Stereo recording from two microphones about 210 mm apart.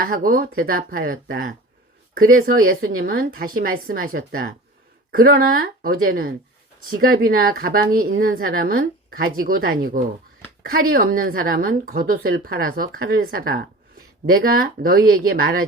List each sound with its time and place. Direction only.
0.0 s a woman's voice: 40° right (ahead or behind)